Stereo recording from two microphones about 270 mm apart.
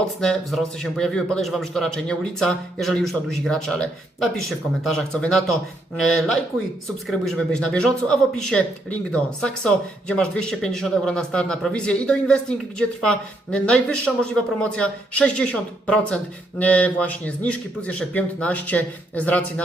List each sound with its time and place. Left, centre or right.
0.2 s speech: centre